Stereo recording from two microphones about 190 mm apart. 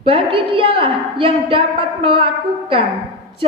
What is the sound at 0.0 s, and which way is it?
A woman's voice, 30° right (ahead or behind).